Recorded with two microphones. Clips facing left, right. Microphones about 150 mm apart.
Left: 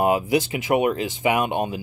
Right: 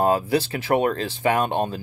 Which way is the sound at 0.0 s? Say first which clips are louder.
Even; 15° left (ahead or behind).